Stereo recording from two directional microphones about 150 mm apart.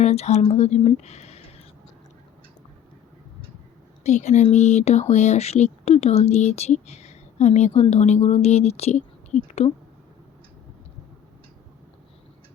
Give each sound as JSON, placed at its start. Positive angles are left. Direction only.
{"t": 0.0, "sound": "speech", "side_deg": 45}
{"t": 4.0, "sound": "speech", "side_deg": 50}